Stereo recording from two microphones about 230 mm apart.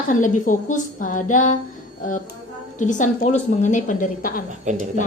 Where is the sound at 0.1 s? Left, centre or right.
Left.